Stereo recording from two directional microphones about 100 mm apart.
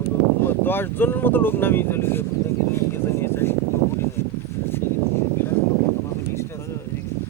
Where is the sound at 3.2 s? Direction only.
25° left (ahead or behind).